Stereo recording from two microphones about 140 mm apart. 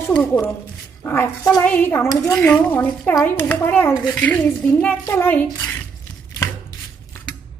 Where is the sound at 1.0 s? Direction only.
15° left (ahead or behind).